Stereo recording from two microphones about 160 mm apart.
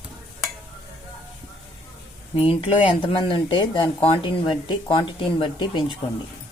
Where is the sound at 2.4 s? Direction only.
35° left (ahead or behind).